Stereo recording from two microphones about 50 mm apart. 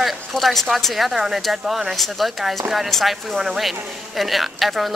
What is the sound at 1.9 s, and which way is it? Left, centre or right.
Speech, centre.